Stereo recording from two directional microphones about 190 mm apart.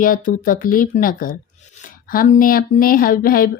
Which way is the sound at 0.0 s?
45° left (ahead or behind).